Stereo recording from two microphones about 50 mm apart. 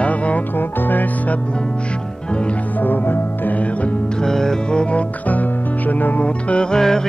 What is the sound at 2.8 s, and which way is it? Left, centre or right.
Music, left.